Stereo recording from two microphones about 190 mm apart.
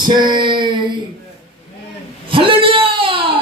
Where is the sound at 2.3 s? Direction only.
25° right (ahead or behind).